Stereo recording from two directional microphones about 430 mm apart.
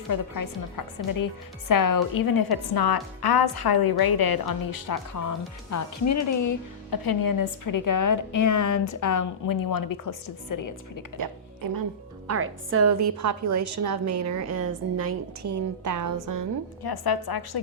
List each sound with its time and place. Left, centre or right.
0.1 s a woman's voice: left
11.2 s a woman's voice: right
12.3 s a woman's voice: right
16.8 s a woman's voice: left